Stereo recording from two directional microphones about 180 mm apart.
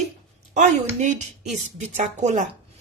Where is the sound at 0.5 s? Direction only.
40° right (ahead or behind).